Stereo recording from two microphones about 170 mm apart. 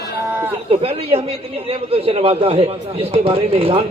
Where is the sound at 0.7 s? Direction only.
35° right (ahead or behind).